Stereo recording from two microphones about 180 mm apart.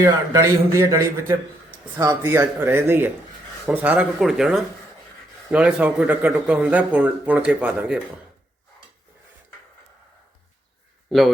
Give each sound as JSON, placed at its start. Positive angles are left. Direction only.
{"t": 0.0, "sound": "a man's voice", "side_deg": -15}
{"t": 2.2, "sound": "a man's voice", "side_deg": -10}